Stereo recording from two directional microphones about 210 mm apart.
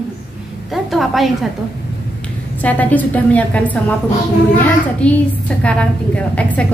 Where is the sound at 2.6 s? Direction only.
5° left (ahead or behind).